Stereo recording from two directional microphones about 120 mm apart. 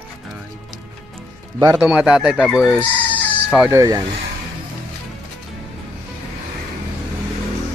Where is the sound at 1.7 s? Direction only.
5° right (ahead or behind).